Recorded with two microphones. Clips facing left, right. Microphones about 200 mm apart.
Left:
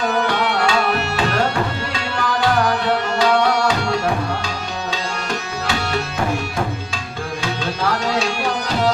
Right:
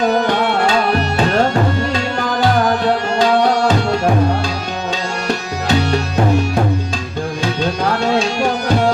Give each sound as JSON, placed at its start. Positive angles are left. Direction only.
{"t": 0.1, "sound": "tabla", "side_deg": -35}